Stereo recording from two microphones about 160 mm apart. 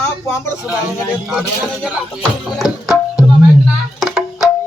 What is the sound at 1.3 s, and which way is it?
Speech, 5° right (ahead or behind).